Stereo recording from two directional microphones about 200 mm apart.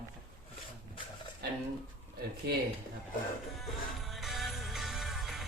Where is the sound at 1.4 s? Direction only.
55° right (ahead or behind).